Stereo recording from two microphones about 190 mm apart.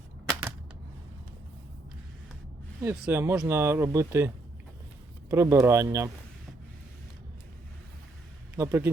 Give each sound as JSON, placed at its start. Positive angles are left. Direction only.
{"t": 2.8, "sound": "speech", "side_deg": -10}
{"t": 5.3, "sound": "speech", "side_deg": -15}
{"t": 8.5, "sound": "speech", "side_deg": -15}